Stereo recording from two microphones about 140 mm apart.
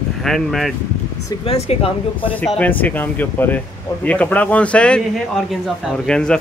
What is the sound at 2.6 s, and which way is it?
Speech, 10° left (ahead or behind).